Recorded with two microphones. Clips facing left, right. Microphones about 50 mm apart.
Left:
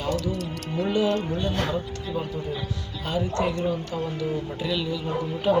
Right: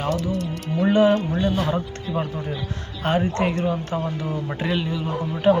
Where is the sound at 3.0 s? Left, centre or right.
Right.